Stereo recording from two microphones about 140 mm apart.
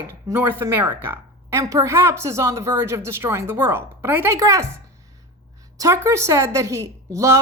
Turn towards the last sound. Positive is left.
turn(degrees=-20)  # may be behind; listen again after turning